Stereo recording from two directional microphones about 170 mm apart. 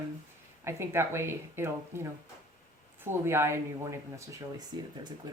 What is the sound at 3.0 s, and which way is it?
Speech, 15° right (ahead or behind).